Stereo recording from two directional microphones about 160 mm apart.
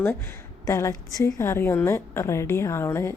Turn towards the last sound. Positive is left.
turn(degrees=15)  # may be behind; listen again after turning